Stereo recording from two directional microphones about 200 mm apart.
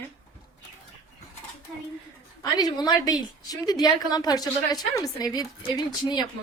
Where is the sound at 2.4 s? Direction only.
20° left (ahead or behind).